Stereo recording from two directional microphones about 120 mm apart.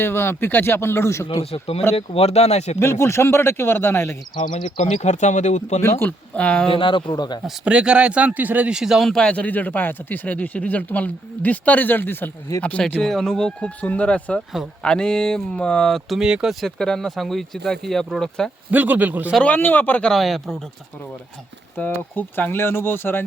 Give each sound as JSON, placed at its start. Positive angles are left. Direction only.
{"t": 0.0, "sound": "speech", "side_deg": 20}
{"t": 1.3, "sound": "speech", "side_deg": 55}
{"t": 2.7, "sound": "speech", "side_deg": 20}
{"t": 4.4, "sound": "speech", "side_deg": 90}
{"t": 6.0, "sound": "speech", "side_deg": 10}
{"t": 6.7, "sound": "speech", "side_deg": 45}
{"t": 7.4, "sound": "speech", "side_deg": -10}
{"t": 12.6, "sound": "speech", "side_deg": 10}
{"t": 18.7, "sound": "a man's voice", "side_deg": -15}
{"t": 19.3, "sound": "speech", "side_deg": 10}
{"t": 21.8, "sound": "speech", "side_deg": 15}